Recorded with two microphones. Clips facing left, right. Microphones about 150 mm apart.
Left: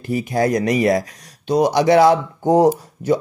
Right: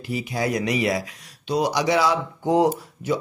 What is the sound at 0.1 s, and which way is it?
Speech, 50° left (ahead or behind).